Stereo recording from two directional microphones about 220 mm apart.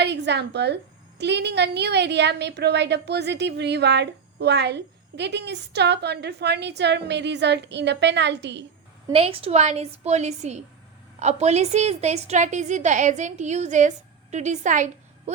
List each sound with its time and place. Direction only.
0.0 s a woman's voice: 50° right (ahead or behind)
9.1 s a woman's voice: 25° right (ahead or behind)